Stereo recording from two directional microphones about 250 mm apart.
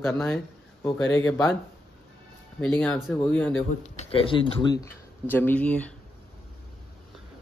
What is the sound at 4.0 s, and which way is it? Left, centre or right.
Speech, left.